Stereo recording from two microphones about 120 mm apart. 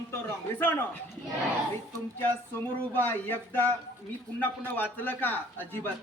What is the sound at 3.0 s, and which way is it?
A man's voice, 15° left (ahead or behind).